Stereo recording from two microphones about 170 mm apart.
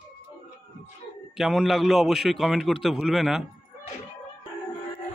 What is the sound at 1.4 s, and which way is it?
A man's voice, centre (ahead or behind).